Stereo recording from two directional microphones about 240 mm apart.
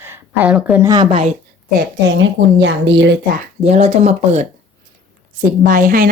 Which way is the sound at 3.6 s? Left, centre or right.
Right.